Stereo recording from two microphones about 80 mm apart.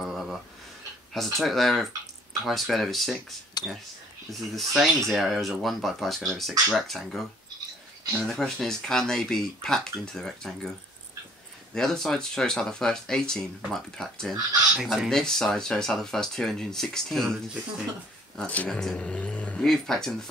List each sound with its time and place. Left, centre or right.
0.0 s a sound: centre
1.1 s speech: centre
3.6 s whispering: left
4.3 s speech: centre
8.3 s speech: centre
11.7 s speech: centre